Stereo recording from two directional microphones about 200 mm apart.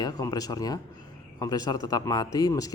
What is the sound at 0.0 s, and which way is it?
A man's voice, 20° left (ahead or behind).